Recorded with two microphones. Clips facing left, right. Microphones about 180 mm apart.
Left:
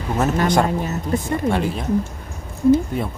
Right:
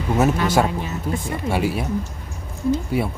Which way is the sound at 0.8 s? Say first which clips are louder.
Left 3 dB; 45° left (ahead or behind).